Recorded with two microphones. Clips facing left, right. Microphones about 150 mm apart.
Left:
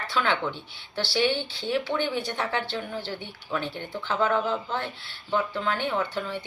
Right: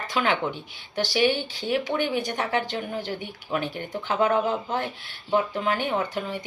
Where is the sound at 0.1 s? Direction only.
15° right (ahead or behind).